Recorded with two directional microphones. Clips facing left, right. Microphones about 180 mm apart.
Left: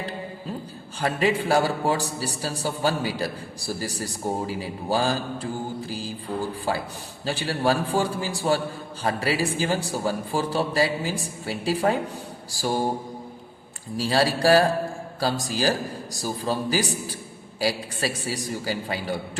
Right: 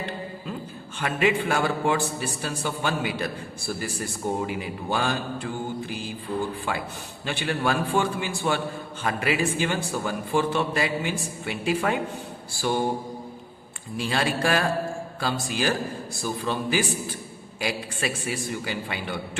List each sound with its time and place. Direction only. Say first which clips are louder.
0.9 s a man's voice: left 1 dB; 35° left (ahead or behind)
13.9 s a man's voice: left 3 dB; 35° left (ahead or behind)